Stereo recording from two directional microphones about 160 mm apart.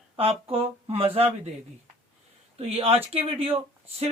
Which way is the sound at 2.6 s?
40° right (ahead or behind).